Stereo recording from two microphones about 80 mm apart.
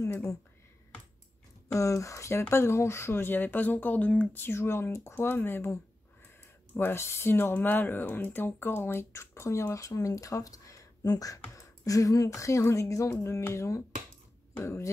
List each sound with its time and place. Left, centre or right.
0.0 s speech: left
1.7 s speech: left
6.8 s speech: left